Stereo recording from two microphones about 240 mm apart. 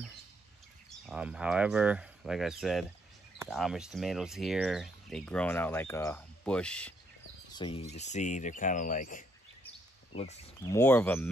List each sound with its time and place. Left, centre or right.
0.8 s speech: centre
7.5 s speech: left
10.7 s speech: centre